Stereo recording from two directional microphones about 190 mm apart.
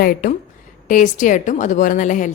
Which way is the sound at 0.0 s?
45° left (ahead or behind).